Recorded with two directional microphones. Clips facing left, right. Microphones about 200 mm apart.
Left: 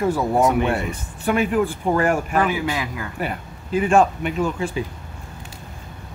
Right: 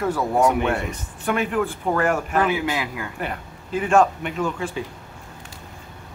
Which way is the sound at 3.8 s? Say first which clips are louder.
Even; 10° left (ahead or behind).